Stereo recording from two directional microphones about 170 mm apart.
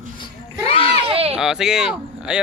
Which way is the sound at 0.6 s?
35° left (ahead or behind).